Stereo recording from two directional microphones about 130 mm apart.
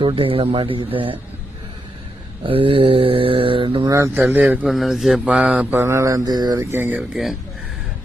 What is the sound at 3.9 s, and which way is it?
Speech, 20° right (ahead or behind).